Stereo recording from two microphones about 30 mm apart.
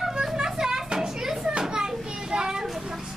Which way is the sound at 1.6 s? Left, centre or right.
Right.